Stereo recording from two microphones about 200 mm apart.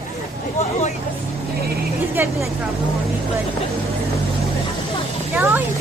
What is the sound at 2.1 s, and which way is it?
Speech, 10° right (ahead or behind).